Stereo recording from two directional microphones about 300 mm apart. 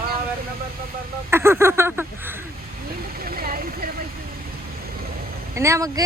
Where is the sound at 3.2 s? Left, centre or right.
Right.